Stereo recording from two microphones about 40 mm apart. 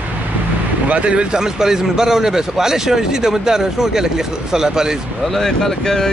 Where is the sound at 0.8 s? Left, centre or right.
Right.